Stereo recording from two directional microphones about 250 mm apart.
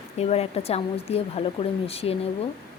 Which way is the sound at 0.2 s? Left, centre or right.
Left.